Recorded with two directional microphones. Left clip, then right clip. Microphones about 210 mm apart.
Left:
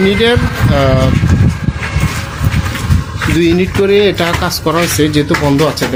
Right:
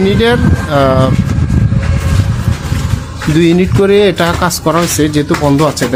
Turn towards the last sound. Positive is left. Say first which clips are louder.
# right 1 dB
turn(degrees=-10)  # may be behind; listen again after turning